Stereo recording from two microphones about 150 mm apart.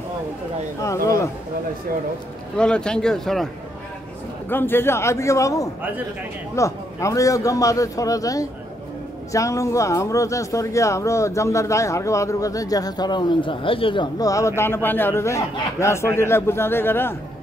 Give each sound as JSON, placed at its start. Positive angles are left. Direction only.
{"t": 0.8, "sound": "speech", "side_deg": 20}
{"t": 2.5, "sound": "speech", "side_deg": 5}
{"t": 4.5, "sound": "speech", "side_deg": 15}